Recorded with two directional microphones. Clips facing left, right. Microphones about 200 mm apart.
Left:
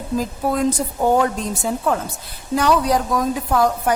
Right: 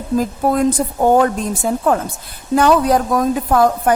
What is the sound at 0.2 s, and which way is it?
A woman's voice, 50° right (ahead or behind).